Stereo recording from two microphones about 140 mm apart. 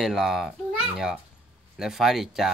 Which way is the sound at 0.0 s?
Centre (ahead or behind).